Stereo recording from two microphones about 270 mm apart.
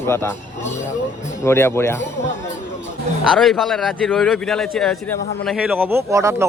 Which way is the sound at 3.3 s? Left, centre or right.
Centre.